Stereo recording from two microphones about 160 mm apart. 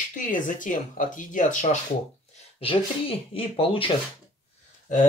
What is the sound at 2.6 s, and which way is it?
Speech, 35° left (ahead or behind).